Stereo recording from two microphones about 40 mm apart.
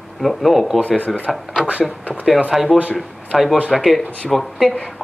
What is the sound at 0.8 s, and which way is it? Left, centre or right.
Speech, left.